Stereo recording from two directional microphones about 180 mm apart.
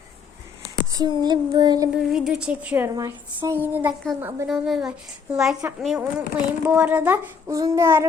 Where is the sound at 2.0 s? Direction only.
5° right (ahead or behind).